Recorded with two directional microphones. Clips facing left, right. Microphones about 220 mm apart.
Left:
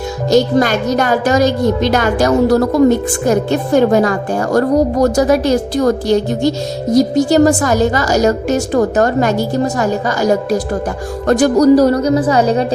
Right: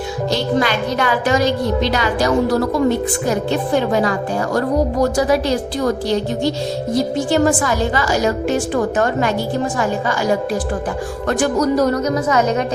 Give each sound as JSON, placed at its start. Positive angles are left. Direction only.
{"t": 0.3, "sound": "a woman's voice", "side_deg": 45}